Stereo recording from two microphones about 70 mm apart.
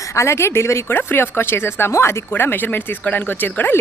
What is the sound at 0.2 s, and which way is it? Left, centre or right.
Speech, left.